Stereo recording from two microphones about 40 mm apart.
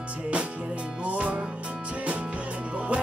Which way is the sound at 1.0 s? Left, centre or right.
Right.